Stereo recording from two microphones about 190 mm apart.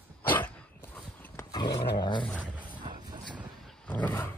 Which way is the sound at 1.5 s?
20° left (ahead or behind).